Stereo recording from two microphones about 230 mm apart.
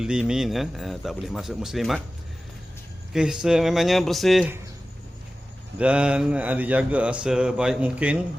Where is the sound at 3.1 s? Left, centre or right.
Centre.